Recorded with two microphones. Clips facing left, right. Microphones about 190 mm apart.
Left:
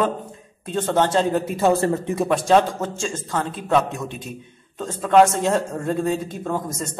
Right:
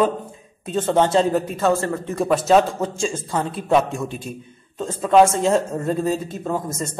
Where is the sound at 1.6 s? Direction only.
15° left (ahead or behind).